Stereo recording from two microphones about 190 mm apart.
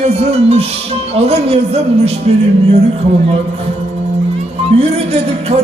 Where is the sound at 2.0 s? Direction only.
30° right (ahead or behind).